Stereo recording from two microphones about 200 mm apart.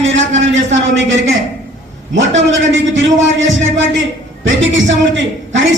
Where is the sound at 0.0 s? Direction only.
70° right (ahead or behind).